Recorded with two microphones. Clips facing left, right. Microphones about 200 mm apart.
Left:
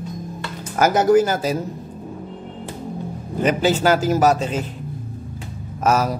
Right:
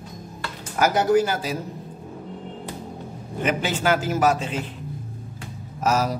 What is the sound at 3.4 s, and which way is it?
A man's voice, 40° left (ahead or behind).